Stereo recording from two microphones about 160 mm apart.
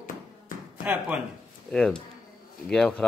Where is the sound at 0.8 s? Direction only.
5° right (ahead or behind).